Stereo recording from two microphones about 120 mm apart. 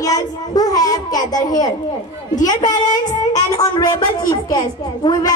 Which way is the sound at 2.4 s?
35° left (ahead or behind).